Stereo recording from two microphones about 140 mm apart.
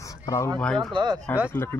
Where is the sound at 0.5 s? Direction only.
5° left (ahead or behind).